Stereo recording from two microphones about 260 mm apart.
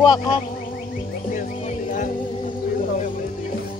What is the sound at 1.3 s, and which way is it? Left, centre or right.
Music, left.